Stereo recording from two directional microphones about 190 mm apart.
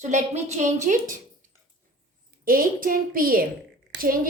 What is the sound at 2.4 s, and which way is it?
A woman's voice, 50° right (ahead or behind).